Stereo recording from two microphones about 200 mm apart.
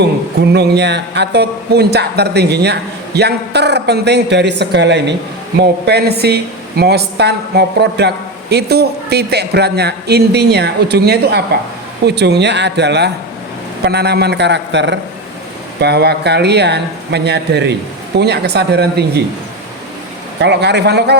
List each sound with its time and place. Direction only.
0.5 s speech: 55° right (ahead or behind)
20.4 s speech: 60° right (ahead or behind)